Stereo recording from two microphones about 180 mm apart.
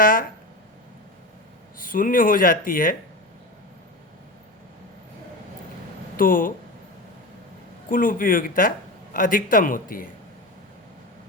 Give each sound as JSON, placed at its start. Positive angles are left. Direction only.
{"t": 0.0, "sound": "speech", "side_deg": 50}
{"t": 1.8, "sound": "speech", "side_deg": 50}
{"t": 6.1, "sound": "speech", "side_deg": 50}
{"t": 7.9, "sound": "speech", "side_deg": 50}